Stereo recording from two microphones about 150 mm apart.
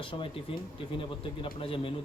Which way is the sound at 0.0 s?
35° left (ahead or behind).